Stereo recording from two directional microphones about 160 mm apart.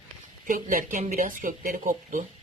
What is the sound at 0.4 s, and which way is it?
Speech, 60° right (ahead or behind).